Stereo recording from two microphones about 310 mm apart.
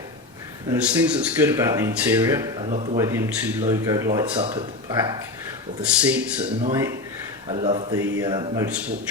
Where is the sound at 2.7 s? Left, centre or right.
Right.